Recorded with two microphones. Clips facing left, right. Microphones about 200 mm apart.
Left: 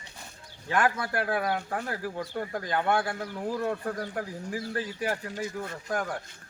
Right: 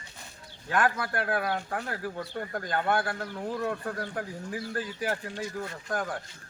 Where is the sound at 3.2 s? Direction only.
10° left (ahead or behind).